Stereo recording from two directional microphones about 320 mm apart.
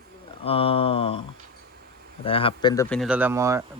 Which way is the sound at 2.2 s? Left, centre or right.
Centre.